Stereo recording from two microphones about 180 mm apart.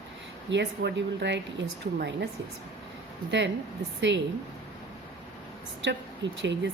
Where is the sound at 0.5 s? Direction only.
75° right (ahead or behind).